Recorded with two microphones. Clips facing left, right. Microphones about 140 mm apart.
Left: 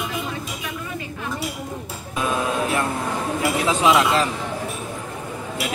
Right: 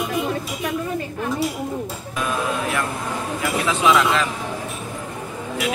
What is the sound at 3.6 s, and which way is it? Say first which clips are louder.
Speech: even; 30° left (ahead or behind).